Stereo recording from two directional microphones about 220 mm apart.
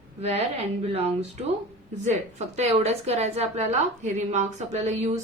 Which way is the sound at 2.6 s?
30° right (ahead or behind).